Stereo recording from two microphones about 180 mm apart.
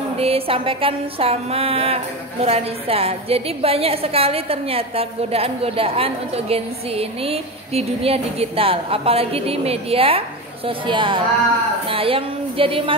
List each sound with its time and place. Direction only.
0.2 s a woman's voice: 30° right (ahead or behind)